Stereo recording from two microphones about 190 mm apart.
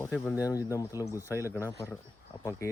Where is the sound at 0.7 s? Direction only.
15° left (ahead or behind).